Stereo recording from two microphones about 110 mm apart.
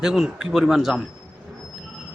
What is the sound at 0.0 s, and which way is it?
Speech, 5° right (ahead or behind).